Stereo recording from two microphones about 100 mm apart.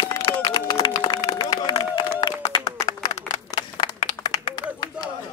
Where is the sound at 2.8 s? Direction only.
35° left (ahead or behind).